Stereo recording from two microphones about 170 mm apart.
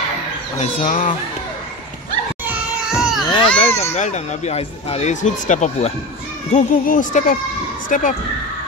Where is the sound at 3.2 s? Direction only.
30° left (ahead or behind); by 8.2 s 50° left (ahead or behind).